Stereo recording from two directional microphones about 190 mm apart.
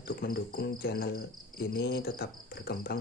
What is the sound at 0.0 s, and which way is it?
Cricket, 50° left (ahead or behind).